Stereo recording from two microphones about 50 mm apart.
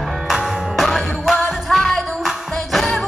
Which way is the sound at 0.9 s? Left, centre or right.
Centre.